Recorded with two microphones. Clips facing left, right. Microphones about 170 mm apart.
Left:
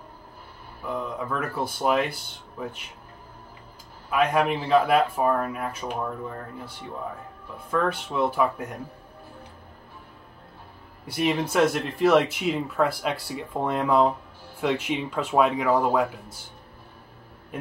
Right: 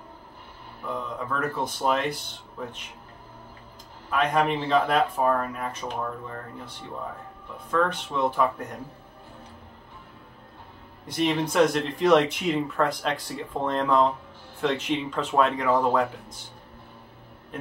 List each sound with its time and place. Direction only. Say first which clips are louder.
0.8 s speech: left 2 dB; 10° left (ahead or behind)
4.1 s speech: left 1 dB; 10° left (ahead or behind)
7.7 s speech: even; 10° left (ahead or behind)
11.1 s speech: even; 10° left (ahead or behind)